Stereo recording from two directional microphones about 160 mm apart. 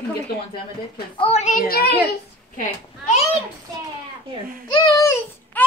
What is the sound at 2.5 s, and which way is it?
Speech, 50° left (ahead or behind).